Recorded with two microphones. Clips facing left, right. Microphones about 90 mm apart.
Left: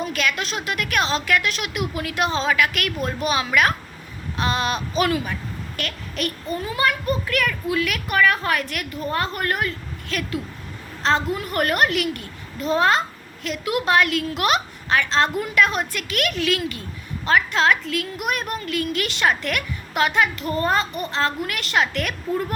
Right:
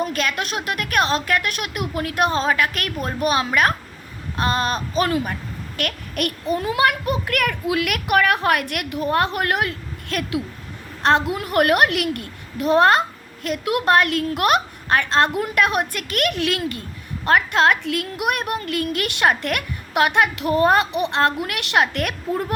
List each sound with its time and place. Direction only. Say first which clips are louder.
0.0 s a woman's voice: right 1 dB; 45° right (ahead or behind)